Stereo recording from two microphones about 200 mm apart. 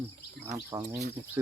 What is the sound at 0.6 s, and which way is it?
Speech, 10° right (ahead or behind).